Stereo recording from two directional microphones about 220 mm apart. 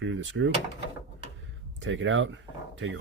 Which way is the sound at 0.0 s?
60° right (ahead or behind).